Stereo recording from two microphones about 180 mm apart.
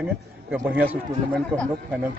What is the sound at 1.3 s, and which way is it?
Speech, 5° left (ahead or behind).